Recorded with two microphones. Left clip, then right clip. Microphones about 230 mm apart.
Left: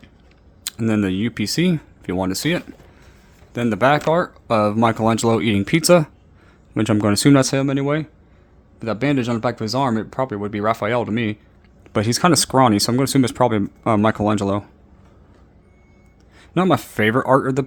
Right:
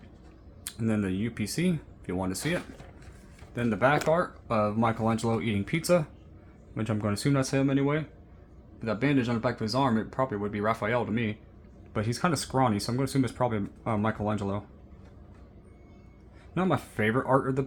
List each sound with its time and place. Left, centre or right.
0.6 s speech: left
16.6 s speech: left